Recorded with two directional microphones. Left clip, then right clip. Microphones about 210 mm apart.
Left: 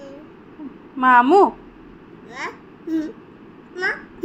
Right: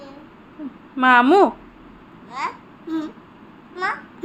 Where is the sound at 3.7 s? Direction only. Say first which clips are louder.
Left 1 dB; 10° right (ahead or behind).